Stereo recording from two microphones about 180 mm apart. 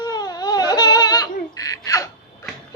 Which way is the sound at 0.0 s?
20° left (ahead or behind).